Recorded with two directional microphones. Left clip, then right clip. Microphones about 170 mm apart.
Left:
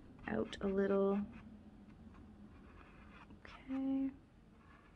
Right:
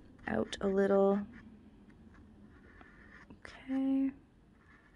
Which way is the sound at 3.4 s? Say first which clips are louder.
Right 6 dB; 35° right (ahead or behind).